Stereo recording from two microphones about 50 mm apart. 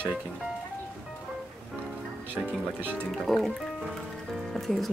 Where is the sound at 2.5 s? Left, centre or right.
Right.